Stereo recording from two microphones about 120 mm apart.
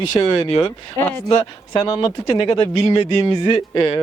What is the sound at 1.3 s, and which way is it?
A man's voice, 35° left (ahead or behind).